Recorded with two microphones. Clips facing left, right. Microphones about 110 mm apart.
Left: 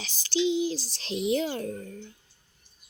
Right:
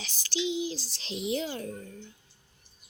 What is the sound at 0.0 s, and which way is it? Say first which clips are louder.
Speech: left 6 dB; 35° left (ahead or behind).